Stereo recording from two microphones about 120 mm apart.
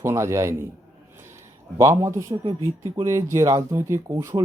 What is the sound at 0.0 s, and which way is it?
A man's voice, 25° right (ahead or behind).